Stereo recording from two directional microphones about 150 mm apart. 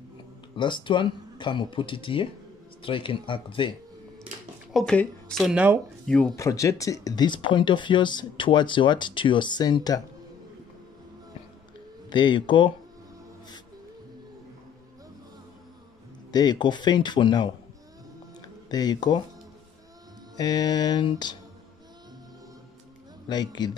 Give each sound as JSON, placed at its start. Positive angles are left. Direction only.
{"t": 0.6, "sound": "speech", "side_deg": 30}
{"t": 4.7, "sound": "speech", "side_deg": 5}
{"t": 6.0, "sound": "speech", "side_deg": 5}
{"t": 6.3, "sound": "speech", "side_deg": 20}
{"t": 12.1, "sound": "speech", "side_deg": 30}
{"t": 16.3, "sound": "speech", "side_deg": 30}
{"t": 18.7, "sound": "speech", "side_deg": 25}
{"t": 20.3, "sound": "speech", "side_deg": 25}
{"t": 23.2, "sound": "speech", "side_deg": 30}